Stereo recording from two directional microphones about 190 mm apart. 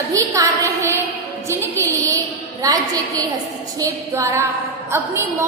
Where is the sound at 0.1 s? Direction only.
15° right (ahead or behind).